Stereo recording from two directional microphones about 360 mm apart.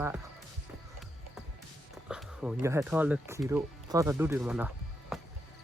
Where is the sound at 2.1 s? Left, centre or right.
Centre.